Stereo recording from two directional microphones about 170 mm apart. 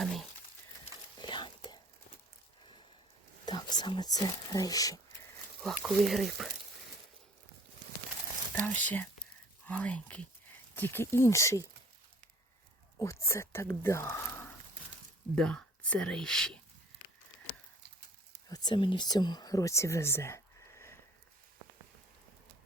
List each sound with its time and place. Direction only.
0.0 s a sound: centre (ahead or behind)
1.2 s a sound: 25° left (ahead or behind)
3.4 s speech: 25° left (ahead or behind)
5.6 s speech: centre (ahead or behind)
8.6 s speech: 10° left (ahead or behind)
13.0 s speech: 15° left (ahead or behind)
15.4 s speech: 5° left (ahead or behind)
18.4 s speech: 25° left (ahead or behind)